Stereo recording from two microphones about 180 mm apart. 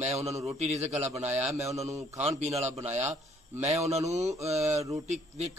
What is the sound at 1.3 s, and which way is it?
Speech, 10° right (ahead or behind).